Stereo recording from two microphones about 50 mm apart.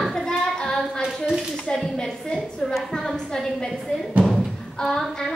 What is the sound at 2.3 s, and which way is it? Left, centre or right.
A woman's voice, centre.